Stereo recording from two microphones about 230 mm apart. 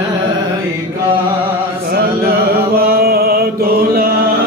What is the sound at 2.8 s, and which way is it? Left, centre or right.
Chant, right.